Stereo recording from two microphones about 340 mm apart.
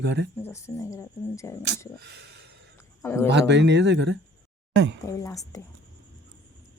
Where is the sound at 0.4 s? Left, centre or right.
Centre.